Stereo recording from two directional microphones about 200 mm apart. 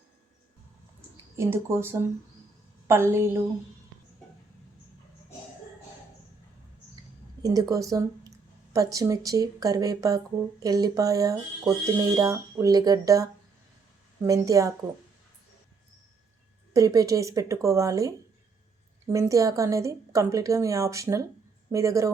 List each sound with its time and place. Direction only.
1.1 s a woman's voice: 15° right (ahead or behind)
7.4 s a woman's voice: 15° right (ahead or behind)
16.7 s a woman's voice: 15° right (ahead or behind)